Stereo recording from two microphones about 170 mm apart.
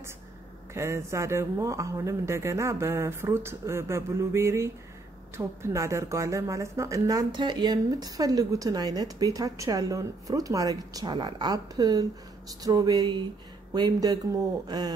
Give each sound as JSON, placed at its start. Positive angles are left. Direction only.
{"t": 0.7, "sound": "a woman's voice", "side_deg": -15}